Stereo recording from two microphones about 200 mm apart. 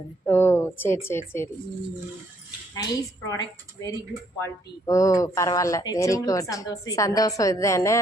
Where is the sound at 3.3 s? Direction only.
20° left (ahead or behind).